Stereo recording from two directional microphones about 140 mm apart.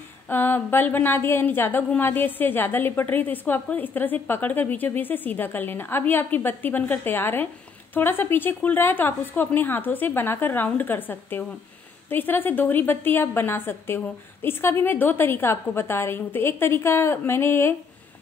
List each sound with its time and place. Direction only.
0.3 s a woman's voice: 15° left (ahead or behind)